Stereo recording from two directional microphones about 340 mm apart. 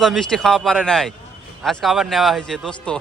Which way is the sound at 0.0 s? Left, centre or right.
Centre.